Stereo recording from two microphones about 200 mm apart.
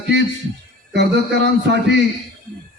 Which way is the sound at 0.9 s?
55° right (ahead or behind).